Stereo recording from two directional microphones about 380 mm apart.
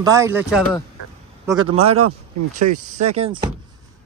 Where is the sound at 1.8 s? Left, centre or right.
Right.